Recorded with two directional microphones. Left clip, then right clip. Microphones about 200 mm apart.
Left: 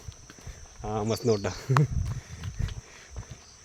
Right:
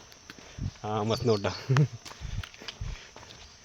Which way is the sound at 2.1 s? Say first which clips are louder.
Right 2 dB; 60° right (ahead or behind).